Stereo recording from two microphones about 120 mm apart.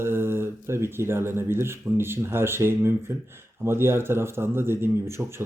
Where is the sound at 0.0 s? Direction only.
20° right (ahead or behind).